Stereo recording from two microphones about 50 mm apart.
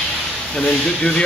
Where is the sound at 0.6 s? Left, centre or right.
Centre.